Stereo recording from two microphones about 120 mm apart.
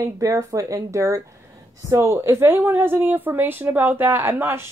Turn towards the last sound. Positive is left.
turn(degrees=-20)  # may be behind; listen again after turning